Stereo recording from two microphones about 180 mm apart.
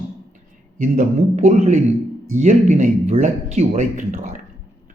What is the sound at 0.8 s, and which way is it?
Speech, 40° right (ahead or behind).